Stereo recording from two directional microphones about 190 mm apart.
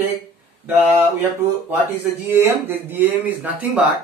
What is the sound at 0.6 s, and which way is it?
Speech, 10° right (ahead or behind).